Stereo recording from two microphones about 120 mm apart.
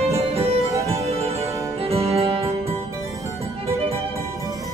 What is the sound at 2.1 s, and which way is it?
Music, 55° right (ahead or behind).